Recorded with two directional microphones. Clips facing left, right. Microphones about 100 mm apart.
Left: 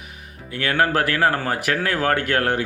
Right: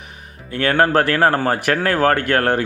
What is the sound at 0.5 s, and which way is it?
A man's voice, 45° right (ahead or behind).